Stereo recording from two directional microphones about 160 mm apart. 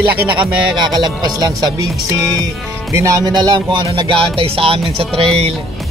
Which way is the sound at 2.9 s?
20° right (ahead or behind).